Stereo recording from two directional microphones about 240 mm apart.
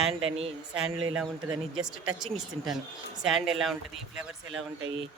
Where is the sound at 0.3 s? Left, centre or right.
Right.